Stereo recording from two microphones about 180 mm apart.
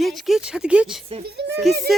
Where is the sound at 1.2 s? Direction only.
70° right (ahead or behind).